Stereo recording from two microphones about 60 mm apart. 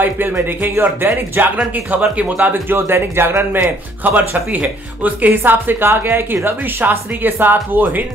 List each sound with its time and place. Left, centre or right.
0.5 s speech: right
2.4 s speech: right